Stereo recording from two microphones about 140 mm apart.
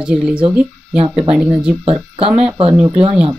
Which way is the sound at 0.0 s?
5° right (ahead or behind).